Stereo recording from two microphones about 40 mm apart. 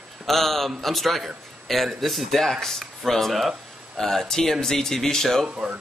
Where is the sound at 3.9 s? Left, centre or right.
Centre.